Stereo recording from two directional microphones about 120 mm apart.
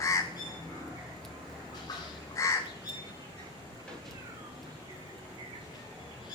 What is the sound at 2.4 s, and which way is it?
Crow, 25° left (ahead or behind).